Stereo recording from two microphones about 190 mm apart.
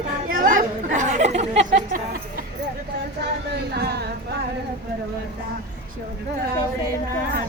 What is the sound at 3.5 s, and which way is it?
Speech, 60° right (ahead or behind).